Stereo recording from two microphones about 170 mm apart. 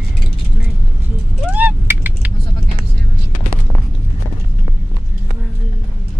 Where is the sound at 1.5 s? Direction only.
10° right (ahead or behind).